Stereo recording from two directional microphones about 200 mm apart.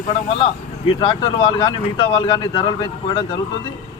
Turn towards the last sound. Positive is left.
turn(degrees=25)  # may be behind; listen again after turning